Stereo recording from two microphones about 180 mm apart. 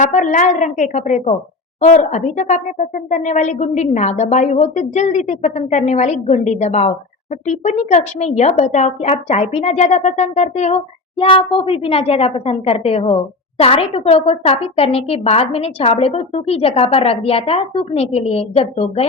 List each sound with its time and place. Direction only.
0.0 s a woman's voice: 45° left (ahead or behind)